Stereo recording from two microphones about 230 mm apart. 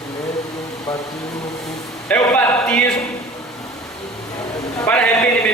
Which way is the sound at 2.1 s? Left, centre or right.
Centre.